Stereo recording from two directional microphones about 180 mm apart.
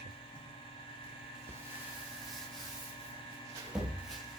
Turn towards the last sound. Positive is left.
turn(degrees=-5)  # may be behind; listen again after turning